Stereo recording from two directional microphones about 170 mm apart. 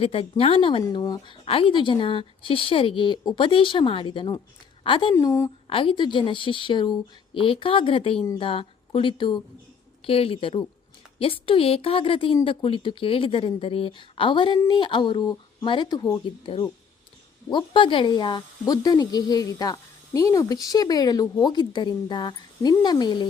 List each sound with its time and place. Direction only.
0.0 s a woman's voice: 35° left (ahead or behind)
5.1 s a woman's voice: 15° left (ahead or behind)
5.6 s a woman's voice: 30° left (ahead or behind)
16.2 s a woman's voice: 30° left (ahead or behind)